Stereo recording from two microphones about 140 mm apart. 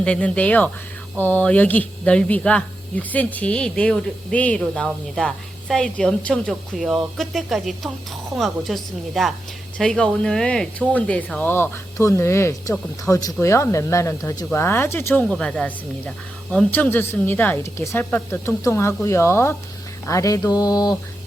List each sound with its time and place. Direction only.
0.0 s a woman's voice: 10° left (ahead or behind)
20.1 s mantra: 25° left (ahead or behind)